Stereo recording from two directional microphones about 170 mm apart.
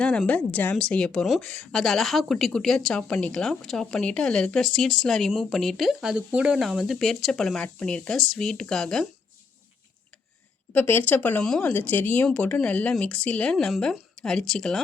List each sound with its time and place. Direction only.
0.0 s a woman's voice: 5° left (ahead or behind)
10.7 s speech: 10° left (ahead or behind)